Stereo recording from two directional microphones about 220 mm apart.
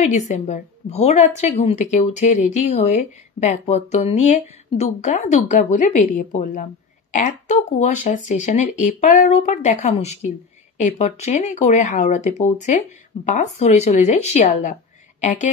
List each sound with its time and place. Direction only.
0.0 s a woman's voice: 30° left (ahead or behind)